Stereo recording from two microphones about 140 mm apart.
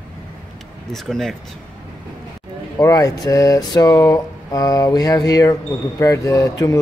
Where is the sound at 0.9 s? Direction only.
Centre (ahead or behind).